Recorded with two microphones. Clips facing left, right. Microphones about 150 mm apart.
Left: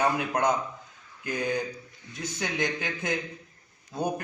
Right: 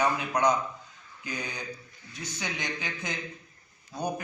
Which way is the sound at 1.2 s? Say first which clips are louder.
Left 8 dB; 55° left (ahead or behind).